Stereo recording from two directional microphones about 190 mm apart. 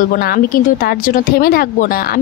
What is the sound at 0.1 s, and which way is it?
Speech, 55° left (ahead or behind).